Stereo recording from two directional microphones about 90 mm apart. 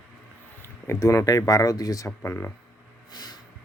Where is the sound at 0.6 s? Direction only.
30° left (ahead or behind).